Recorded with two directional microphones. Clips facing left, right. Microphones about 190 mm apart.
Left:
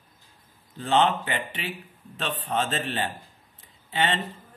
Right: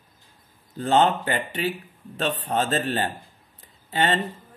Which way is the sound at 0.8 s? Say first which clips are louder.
Right 3 dB; 40° right (ahead or behind).